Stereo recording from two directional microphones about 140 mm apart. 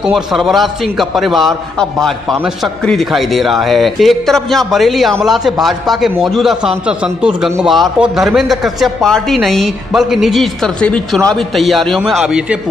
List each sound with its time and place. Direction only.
0.0 s a man's voice: centre (ahead or behind)